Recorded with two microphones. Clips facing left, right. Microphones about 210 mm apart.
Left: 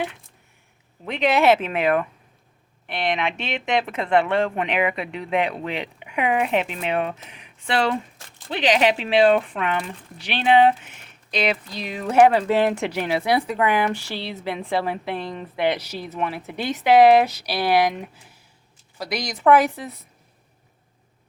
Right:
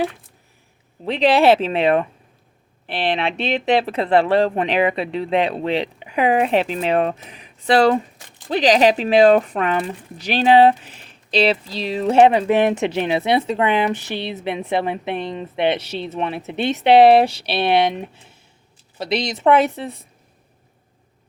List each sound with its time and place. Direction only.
1.0 s speech: 30° right (ahead or behind)